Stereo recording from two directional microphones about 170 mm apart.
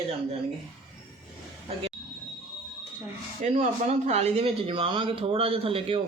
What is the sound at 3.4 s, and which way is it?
Speech, 40° right (ahead or behind).